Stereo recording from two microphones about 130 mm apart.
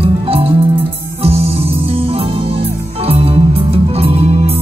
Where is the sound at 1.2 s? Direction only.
50° right (ahead or behind).